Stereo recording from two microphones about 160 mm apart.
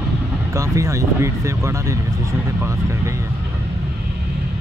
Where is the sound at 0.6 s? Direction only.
20° right (ahead or behind).